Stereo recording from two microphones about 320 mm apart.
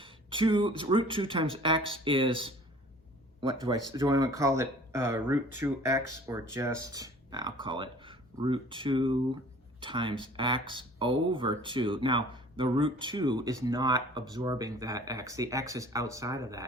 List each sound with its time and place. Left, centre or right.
0.0 s speech: centre